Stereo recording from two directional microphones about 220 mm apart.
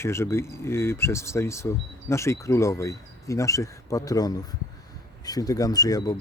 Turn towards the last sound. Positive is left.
turn(degrees=15)  # may be behind; listen again after turning